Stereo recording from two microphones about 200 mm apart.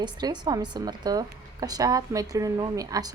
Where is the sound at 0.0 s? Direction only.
20° right (ahead or behind).